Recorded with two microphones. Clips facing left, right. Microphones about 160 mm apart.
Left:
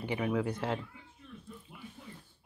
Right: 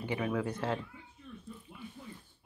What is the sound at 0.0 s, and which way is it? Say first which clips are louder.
Speech: left 1 dB; 15° left (ahead or behind).